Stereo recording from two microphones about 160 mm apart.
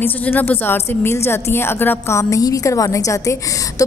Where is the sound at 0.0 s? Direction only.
10° left (ahead or behind).